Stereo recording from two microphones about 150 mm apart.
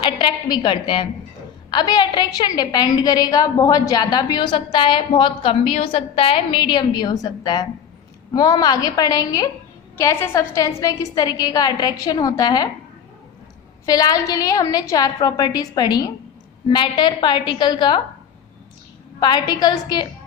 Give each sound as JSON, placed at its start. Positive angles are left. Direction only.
{"t": 0.0, "sound": "a woman's voice", "side_deg": 30}
{"t": 13.8, "sound": "a woman's voice", "side_deg": 25}
{"t": 19.2, "sound": "a woman's voice", "side_deg": 25}